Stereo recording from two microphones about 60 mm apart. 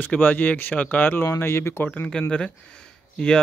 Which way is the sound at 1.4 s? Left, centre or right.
Left.